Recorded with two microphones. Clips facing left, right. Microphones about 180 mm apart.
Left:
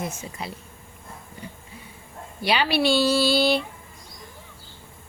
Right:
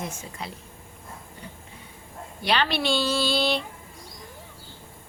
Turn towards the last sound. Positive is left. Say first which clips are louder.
# left 4 dB
turn(degrees=10)  # may be behind; listen again after turning